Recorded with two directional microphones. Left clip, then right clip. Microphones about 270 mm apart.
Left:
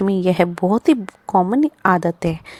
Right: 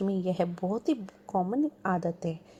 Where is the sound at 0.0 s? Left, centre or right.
Left.